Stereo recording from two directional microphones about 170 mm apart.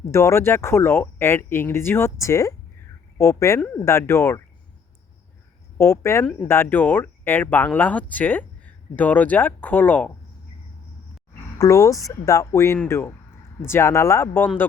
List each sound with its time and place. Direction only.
0.0 s speech: 15° left (ahead or behind)
5.7 s speech: 15° left (ahead or behind)
11.5 s speech: 20° left (ahead or behind)